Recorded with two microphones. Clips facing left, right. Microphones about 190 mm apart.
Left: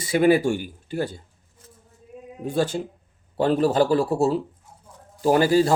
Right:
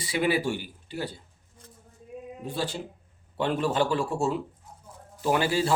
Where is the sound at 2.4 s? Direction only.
45° left (ahead or behind).